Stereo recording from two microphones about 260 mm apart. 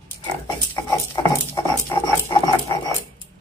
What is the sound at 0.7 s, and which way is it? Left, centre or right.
Patter, centre.